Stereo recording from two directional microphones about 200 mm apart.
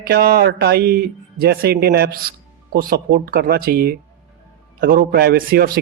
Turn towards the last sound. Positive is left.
turn(degrees=-45)  # may be behind; listen again after turning